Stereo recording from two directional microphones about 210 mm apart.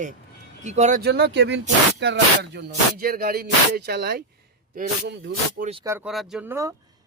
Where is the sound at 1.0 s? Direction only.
50° right (ahead or behind).